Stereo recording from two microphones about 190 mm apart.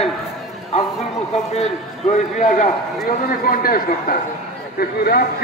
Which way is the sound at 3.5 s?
50° left (ahead or behind).